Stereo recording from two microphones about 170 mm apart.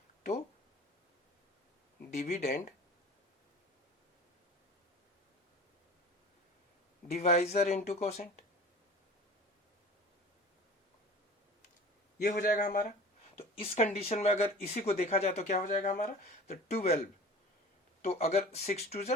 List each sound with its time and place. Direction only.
2.1 s speech: 40° left (ahead or behind)
7.1 s speech: 40° left (ahead or behind)
12.3 s speech: 50° left (ahead or behind)
13.3 s speech: 35° left (ahead or behind)
18.0 s speech: 40° left (ahead or behind)